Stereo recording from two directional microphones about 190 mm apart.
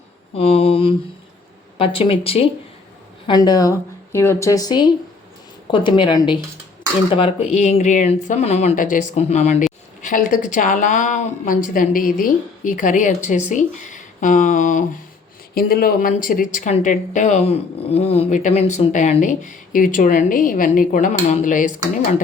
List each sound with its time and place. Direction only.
0.3 s a woman's voice: 30° left (ahead or behind)
15.5 s speech: 50° left (ahead or behind)